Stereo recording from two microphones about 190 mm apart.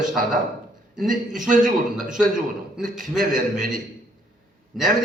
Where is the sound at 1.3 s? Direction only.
5° right (ahead or behind).